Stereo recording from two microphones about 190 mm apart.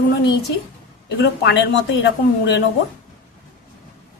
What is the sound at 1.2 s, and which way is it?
A woman's voice, 65° left (ahead or behind).